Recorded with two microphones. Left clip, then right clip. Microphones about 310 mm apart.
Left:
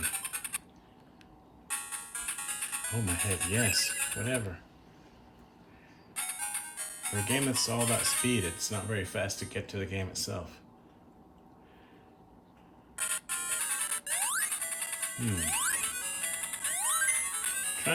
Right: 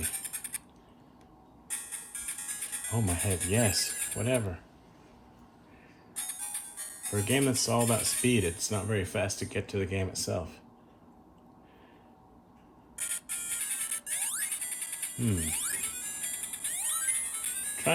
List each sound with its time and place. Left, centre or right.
0.0 s a sound: centre
1.6 s music: centre
3.5 s speech: centre
3.8 s a sound: centre
4.2 s speech: centre
6.1 s music: centre
7.8 s speech: centre
8.3 s speech: centre
13.0 s music: centre